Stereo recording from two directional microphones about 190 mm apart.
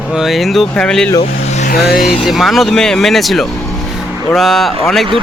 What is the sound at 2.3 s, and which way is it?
Speech, centre (ahead or behind).